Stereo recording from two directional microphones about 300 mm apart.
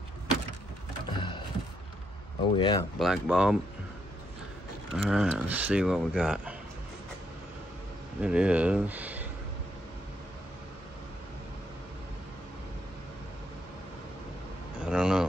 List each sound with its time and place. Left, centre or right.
1.1 s a sound: centre
2.5 s speech: centre
3.0 s speech: centre
4.9 s speech: centre
8.2 s speech: centre
14.8 s a sound: centre